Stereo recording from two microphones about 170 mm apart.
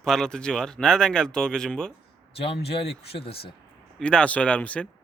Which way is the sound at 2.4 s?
35° left (ahead or behind).